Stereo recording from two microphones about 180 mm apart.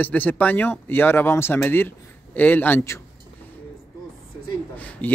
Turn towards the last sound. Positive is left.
turn(degrees=10)  # may be behind; listen again after turning